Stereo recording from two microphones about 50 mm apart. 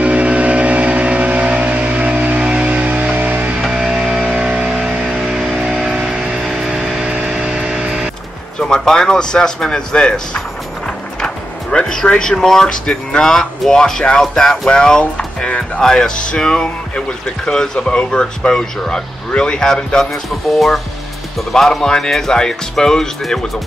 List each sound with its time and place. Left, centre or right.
0.0 s vehicle: right
3.6 s music: centre
8.5 s speech: centre
15.8 s speech: centre
20.4 s speech: centre